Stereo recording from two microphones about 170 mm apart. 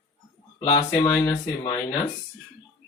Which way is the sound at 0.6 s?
25° left (ahead or behind).